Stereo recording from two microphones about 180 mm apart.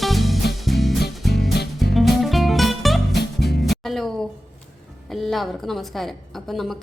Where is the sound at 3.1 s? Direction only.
65° left (ahead or behind).